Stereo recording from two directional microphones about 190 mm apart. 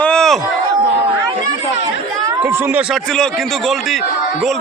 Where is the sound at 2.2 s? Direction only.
15° right (ahead or behind).